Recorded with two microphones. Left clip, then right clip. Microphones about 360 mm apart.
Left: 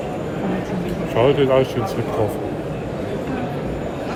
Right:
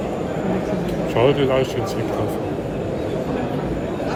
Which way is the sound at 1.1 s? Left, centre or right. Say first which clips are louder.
Left 2 dB; centre.